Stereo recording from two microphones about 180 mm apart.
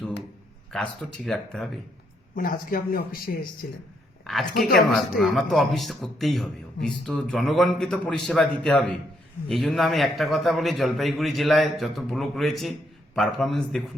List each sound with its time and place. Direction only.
0.7 s a man's voice: 5° left (ahead or behind)
2.3 s speech: 50° left (ahead or behind)
4.2 s a woman's voice: centre (ahead or behind)